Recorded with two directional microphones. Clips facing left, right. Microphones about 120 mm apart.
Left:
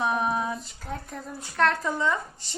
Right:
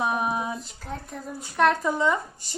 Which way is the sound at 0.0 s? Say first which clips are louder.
Even; 10° right (ahead or behind).